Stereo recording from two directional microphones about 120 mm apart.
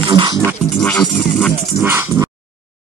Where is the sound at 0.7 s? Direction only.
10° left (ahead or behind).